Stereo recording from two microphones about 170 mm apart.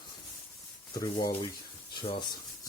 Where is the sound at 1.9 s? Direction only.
30° left (ahead or behind).